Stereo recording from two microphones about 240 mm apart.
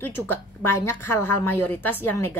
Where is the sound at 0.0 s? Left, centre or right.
Centre.